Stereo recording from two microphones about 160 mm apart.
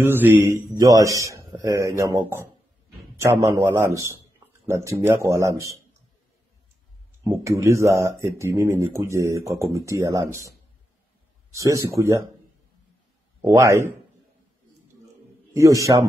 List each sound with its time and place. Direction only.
0.0 s speech: 15° right (ahead or behind)
7.4 s speech: 20° right (ahead or behind)
11.5 s speech: 20° right (ahead or behind)
13.4 s speech: 20° right (ahead or behind)
15.5 s speech: 20° right (ahead or behind)